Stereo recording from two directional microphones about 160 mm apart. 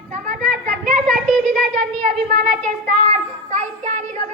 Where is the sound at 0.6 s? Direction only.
55° right (ahead or behind).